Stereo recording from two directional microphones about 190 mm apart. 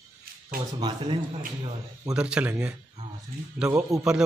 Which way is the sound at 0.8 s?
25° right (ahead or behind).